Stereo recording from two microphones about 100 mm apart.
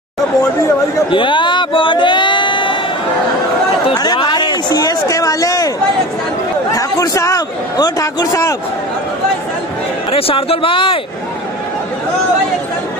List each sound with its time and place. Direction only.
1.1 s a sound: 55° left (ahead or behind)
4.0 s speech: 45° left (ahead or behind)
6.7 s a man's voice: 35° left (ahead or behind)
10.1 s speech: 75° left (ahead or behind)